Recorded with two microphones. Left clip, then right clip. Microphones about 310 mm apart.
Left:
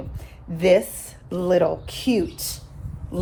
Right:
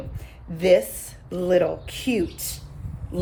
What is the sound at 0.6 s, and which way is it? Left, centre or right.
A woman's voice, centre.